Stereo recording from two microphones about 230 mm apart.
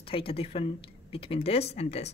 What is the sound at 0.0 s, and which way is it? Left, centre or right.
Speech, left.